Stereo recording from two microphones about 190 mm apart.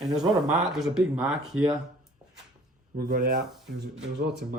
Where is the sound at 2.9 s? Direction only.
50° right (ahead or behind).